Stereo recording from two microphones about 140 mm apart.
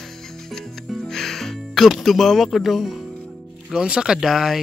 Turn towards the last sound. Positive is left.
turn(degrees=0)  # may be behind; listen again after turning